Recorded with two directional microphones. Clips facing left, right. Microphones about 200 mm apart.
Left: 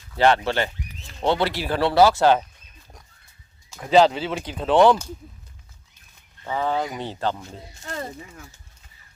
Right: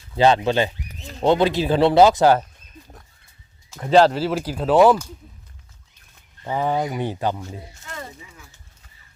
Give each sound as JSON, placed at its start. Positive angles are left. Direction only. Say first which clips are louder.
{"t": 0.1, "sound": "speech", "louder": "right 2 dB", "side_deg": -20}
{"t": 3.8, "sound": "speech", "louder": "right 2 dB", "side_deg": 0}
{"t": 6.4, "sound": "speech", "louder": "right 2 dB", "side_deg": -15}
{"t": 7.9, "sound": "a sound", "louder": "left 6 dB", "side_deg": 35}